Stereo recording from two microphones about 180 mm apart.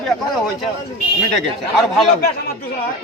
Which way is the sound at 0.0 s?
Centre (ahead or behind).